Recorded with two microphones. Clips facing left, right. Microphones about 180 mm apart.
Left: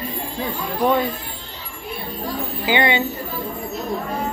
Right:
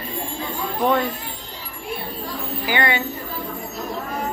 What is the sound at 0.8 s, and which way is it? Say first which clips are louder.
Speech: left 1 dB; 5° left (ahead or behind).